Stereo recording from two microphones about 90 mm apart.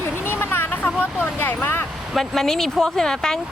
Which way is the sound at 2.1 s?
5° left (ahead or behind).